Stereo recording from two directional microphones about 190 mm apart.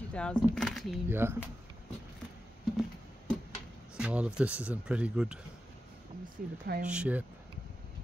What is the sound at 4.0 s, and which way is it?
Speech, 5° right (ahead or behind).